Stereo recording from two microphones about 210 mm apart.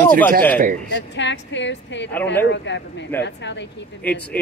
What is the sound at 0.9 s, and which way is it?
A woman's voice, 60° left (ahead or behind).